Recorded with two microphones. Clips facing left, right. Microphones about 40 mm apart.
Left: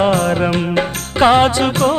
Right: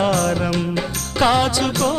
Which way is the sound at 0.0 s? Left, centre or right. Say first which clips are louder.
Left 4 dB; left.